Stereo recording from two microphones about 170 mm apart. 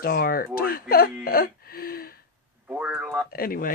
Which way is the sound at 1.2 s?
60° left (ahead or behind).